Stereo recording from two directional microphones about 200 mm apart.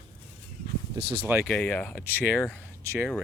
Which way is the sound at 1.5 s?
5° left (ahead or behind).